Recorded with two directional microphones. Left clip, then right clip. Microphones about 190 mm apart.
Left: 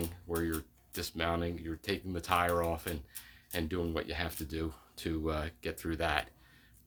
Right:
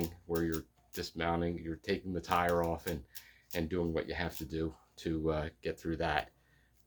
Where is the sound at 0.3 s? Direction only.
25° left (ahead or behind).